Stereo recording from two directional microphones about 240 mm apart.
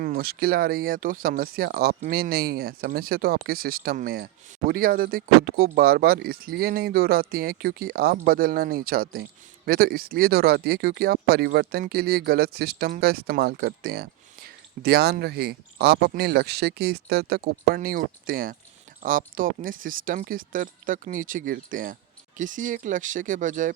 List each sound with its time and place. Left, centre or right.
0.0 s speech: right